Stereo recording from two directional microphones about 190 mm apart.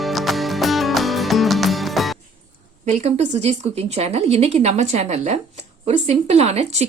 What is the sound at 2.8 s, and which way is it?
Speech, 35° right (ahead or behind).